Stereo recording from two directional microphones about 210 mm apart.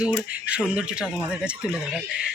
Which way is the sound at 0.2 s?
5° right (ahead or behind).